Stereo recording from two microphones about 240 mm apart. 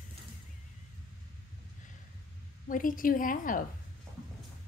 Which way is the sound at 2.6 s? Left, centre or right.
Left.